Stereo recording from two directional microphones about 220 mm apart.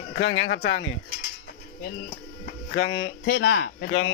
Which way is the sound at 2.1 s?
40° left (ahead or behind).